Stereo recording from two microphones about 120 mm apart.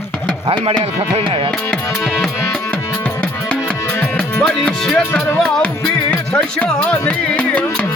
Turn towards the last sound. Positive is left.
turn(degrees=10)  # may be behind; listen again after turning